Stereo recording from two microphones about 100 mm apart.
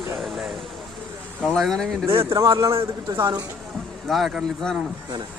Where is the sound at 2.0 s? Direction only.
30° right (ahead or behind).